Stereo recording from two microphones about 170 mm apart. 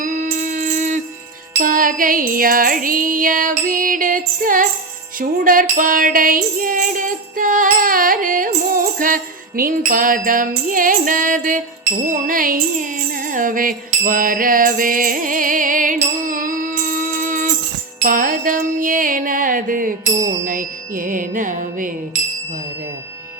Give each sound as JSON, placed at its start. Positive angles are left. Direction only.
{"t": 0.0, "sound": "music", "side_deg": -50}